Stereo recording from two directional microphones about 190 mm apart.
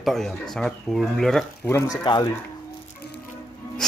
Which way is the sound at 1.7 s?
15° left (ahead or behind).